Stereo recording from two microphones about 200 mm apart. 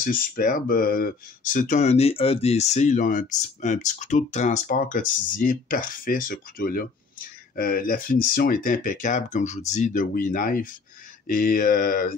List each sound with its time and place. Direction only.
0.0 s speech: 45° left (ahead or behind)